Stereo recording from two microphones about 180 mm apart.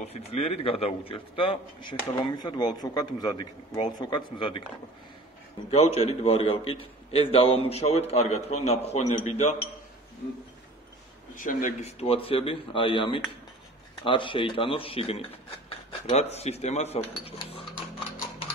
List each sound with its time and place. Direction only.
0.0 s a man's voice: 35° left (ahead or behind)
5.7 s a man's voice: 35° left (ahead or behind)
11.3 s speech: 45° left (ahead or behind)
12.0 s a man's voice: 30° left (ahead or behind)